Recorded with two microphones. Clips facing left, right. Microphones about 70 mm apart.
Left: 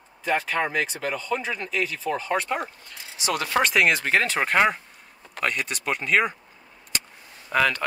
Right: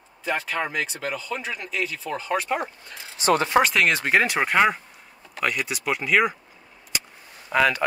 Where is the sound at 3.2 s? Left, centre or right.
Right.